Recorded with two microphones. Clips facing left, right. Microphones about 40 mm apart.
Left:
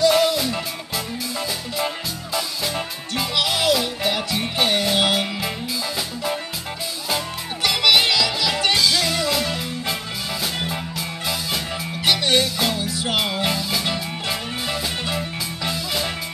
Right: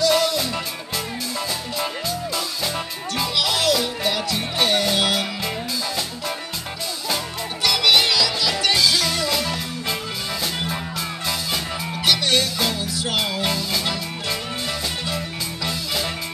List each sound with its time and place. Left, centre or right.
0.1 s music: centre
2.3 s music: centre
7.6 s music: left
8.7 s music: centre
12.1 s music: centre
15.7 s music: centre